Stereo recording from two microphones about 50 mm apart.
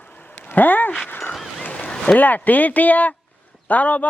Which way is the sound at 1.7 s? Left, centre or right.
Centre.